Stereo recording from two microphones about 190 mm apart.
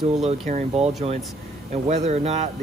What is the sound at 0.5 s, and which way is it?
Speech, 35° right (ahead or behind).